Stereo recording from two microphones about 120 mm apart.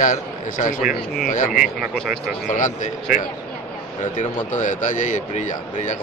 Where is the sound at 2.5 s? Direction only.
90° left.